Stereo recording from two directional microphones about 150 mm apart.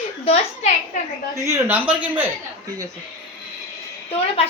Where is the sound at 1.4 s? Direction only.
15° right (ahead or behind).